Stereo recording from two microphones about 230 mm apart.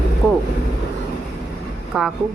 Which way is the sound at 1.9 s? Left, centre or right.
Centre.